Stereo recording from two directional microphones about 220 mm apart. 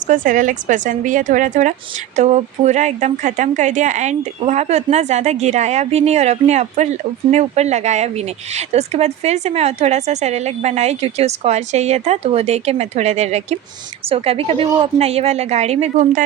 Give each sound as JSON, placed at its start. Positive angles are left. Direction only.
{"t": 0.1, "sound": "a woman's voice", "side_deg": -35}